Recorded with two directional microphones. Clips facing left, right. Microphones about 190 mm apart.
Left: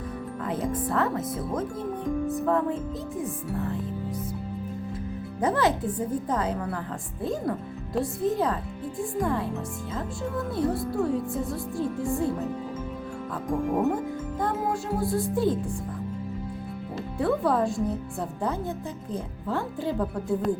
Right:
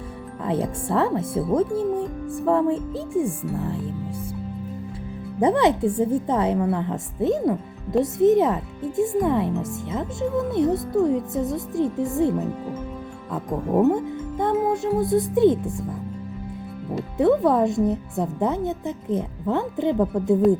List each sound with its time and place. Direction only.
0.4 s a woman's voice: 30° right (ahead or behind)
5.4 s a woman's voice: 25° right (ahead or behind)
13.9 s a woman's voice: 20° right (ahead or behind)
17.2 s a woman's voice: 20° right (ahead or behind)